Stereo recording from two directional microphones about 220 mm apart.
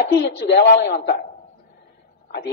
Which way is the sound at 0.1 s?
50° left (ahead or behind).